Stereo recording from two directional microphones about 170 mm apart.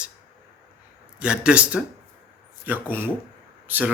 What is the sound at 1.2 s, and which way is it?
Speech, 5° right (ahead or behind).